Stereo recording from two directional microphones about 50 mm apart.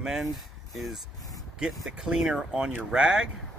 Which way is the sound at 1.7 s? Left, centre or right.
Centre.